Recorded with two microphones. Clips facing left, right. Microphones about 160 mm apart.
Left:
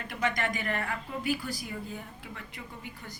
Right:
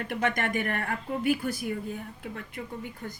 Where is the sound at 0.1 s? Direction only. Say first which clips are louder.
Right 2 dB; 60° right (ahead or behind).